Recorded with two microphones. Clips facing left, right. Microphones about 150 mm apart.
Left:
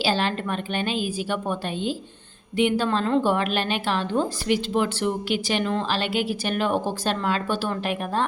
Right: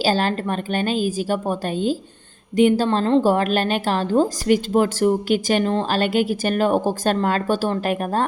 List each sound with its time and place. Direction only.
0.0 s a woman's voice: 40° right (ahead or behind)